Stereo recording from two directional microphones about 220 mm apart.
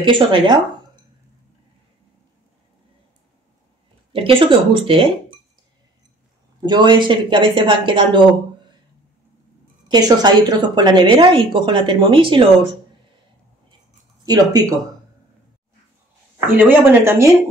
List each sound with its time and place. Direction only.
0.0 s a woman's voice: 20° right (ahead or behind)
4.1 s a woman's voice: 25° right (ahead or behind)
6.6 s a woman's voice: 20° right (ahead or behind)
9.8 s a woman's voice: 20° right (ahead or behind)
14.2 s speech: 15° right (ahead or behind)
16.5 s speech: 10° right (ahead or behind)